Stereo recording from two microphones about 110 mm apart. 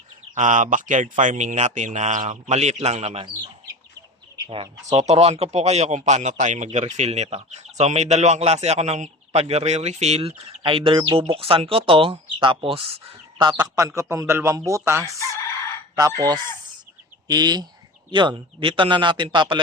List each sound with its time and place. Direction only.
1.1 s a man's voice: 90° right
4.4 s speech: 50° right (ahead or behind)
4.9 s speech: 80° right
10.6 s speech: 55° right (ahead or behind)
13.4 s fowl: 40° right (ahead or behind)
13.7 s speech: 30° right (ahead or behind)
16.0 s fowl: 35° right (ahead or behind)
18.1 s speech: 45° right (ahead or behind)